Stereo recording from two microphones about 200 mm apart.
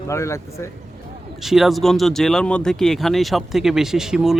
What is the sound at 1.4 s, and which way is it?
Speech, centre (ahead or behind).